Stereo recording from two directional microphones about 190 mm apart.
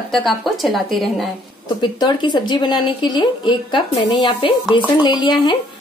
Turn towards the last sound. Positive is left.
turn(degrees=25)  # may be behind; listen again after turning